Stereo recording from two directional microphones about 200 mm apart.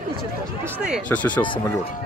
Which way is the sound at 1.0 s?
5° left (ahead or behind).